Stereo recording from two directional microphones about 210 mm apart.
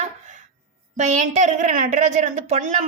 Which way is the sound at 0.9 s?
35° right (ahead or behind).